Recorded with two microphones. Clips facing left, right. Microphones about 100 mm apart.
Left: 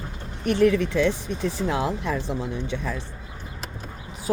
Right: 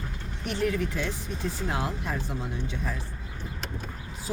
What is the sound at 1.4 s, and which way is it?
Speech, 90° left.